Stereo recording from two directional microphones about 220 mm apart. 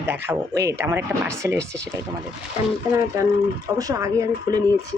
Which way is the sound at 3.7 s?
15° right (ahead or behind).